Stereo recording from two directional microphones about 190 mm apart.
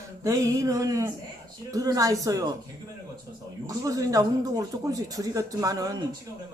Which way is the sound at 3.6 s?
15° right (ahead or behind).